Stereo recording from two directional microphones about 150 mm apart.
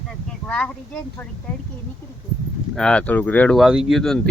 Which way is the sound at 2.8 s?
5° left (ahead or behind).